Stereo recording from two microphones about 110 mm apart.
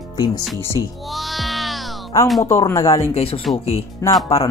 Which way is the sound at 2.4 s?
25° left (ahead or behind).